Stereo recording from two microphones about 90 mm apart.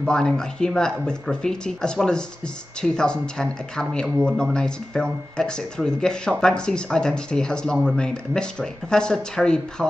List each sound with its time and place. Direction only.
0.0 s speech: 5° left (ahead or behind)